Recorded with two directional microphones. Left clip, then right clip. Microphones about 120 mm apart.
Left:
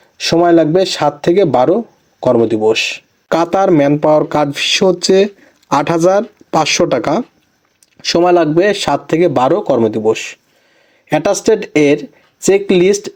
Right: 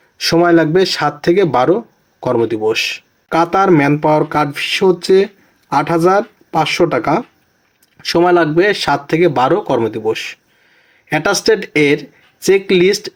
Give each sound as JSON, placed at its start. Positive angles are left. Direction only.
{"t": 0.2, "sound": "speech", "side_deg": 30}
{"t": 5.0, "sound": "a sound", "side_deg": 35}
{"t": 5.7, "sound": "speech", "side_deg": 40}